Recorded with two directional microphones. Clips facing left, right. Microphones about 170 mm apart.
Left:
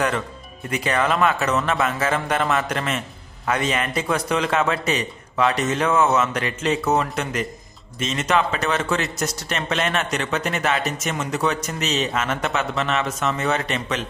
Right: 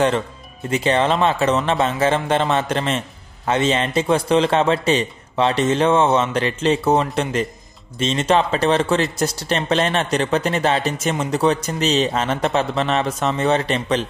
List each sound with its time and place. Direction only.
0.7 s a man's voice: 25° right (ahead or behind)